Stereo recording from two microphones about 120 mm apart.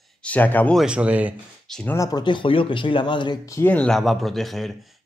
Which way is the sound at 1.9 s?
30° left (ahead or behind).